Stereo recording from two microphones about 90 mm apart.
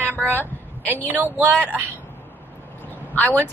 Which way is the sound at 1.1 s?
20° right (ahead or behind).